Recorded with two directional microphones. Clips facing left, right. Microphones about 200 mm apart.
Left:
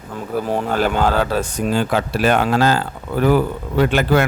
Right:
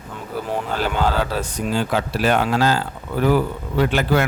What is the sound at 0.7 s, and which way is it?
Speech, 50° left (ahead or behind).